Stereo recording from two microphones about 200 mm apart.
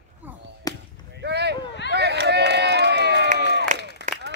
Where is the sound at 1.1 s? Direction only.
55° right (ahead or behind).